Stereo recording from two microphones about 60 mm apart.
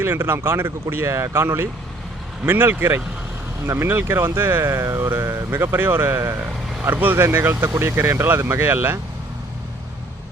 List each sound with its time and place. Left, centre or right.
0.0 s speech: right
2.5 s speech: right